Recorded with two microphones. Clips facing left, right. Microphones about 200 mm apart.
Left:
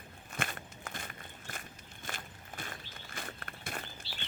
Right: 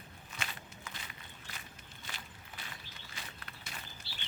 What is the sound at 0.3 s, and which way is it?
Walk, 50° left (ahead or behind).